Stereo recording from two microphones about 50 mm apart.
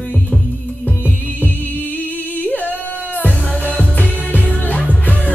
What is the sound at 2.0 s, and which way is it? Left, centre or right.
Music, left.